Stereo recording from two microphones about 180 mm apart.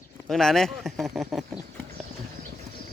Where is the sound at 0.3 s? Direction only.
Centre (ahead or behind).